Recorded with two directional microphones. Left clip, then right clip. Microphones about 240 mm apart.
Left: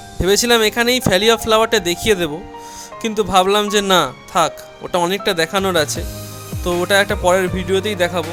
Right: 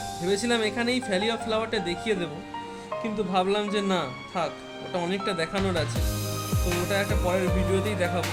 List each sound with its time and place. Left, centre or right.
0.3 s speech: left